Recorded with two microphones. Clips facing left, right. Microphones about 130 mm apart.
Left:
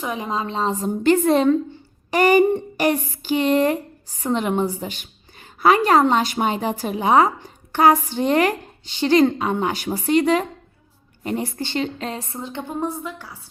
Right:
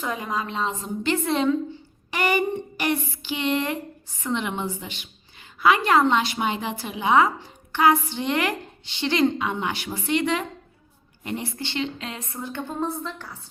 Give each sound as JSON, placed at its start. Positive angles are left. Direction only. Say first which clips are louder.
{"t": 0.0, "sound": "a woman's voice", "louder": "left 3 dB", "side_deg": 20}